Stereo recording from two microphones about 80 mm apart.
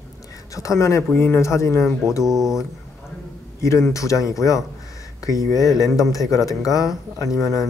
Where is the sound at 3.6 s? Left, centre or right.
Left.